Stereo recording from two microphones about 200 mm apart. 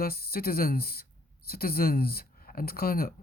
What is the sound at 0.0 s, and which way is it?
Speech, 50° left (ahead or behind).